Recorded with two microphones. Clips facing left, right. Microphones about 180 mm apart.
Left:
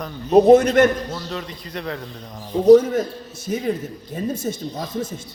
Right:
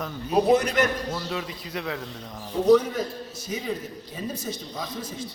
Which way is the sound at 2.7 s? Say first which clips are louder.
Left 7 dB; 45° left (ahead or behind).